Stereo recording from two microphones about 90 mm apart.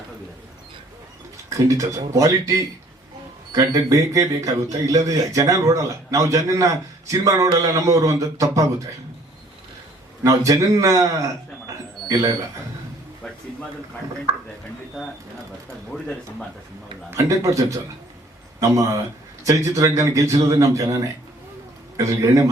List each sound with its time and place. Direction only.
1.5 s speech: 35° right (ahead or behind)
10.2 s a man's voice: 40° right (ahead or behind)
17.1 s speech: 35° right (ahead or behind)